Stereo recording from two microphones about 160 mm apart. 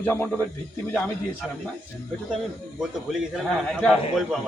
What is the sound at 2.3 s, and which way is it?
A man's voice, 5° right (ahead or behind).